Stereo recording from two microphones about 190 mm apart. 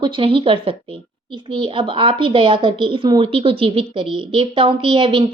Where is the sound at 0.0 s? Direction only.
25° right (ahead or behind).